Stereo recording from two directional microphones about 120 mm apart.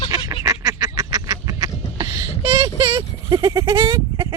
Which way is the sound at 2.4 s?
35° right (ahead or behind).